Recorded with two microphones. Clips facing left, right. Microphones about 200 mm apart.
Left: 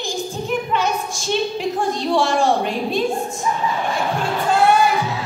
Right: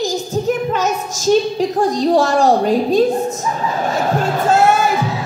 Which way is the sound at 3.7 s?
40° right (ahead or behind).